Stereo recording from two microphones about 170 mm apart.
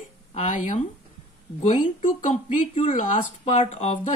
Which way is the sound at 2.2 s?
50° left (ahead or behind).